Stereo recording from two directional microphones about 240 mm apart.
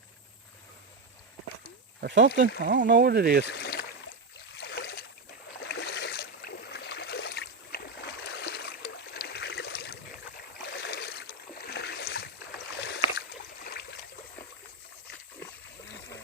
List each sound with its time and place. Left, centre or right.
2.0 s speech: right
3.4 s speech: left
4.5 s boat: left
5.6 s a sound: left
10.6 s rowboat: left
12.7 s boat: left